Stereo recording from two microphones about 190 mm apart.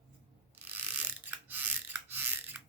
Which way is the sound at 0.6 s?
10° right (ahead or behind).